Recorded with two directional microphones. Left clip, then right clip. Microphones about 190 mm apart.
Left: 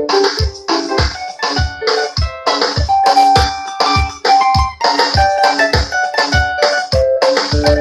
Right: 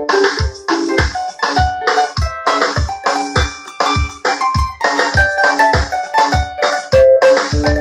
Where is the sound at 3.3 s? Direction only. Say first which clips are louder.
Left 7 dB; 10° left (ahead or behind).